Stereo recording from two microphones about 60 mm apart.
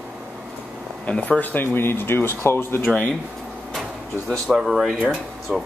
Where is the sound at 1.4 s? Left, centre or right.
Left.